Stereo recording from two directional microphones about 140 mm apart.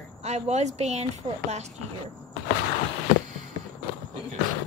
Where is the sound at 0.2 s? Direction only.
50° right (ahead or behind).